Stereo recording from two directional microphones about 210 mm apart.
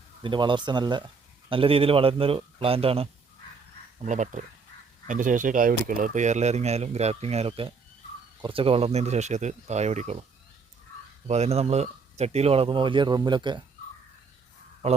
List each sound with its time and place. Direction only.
0.2 s speech: 25° right (ahead or behind)
11.3 s speech: 30° right (ahead or behind)